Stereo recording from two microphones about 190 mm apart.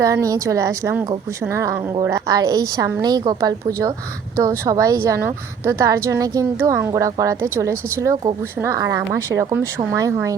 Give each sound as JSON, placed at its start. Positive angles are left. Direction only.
{"t": 0.0, "sound": "a woman's voice", "side_deg": -15}